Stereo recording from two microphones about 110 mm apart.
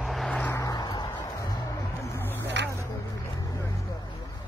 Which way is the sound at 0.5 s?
35° left (ahead or behind).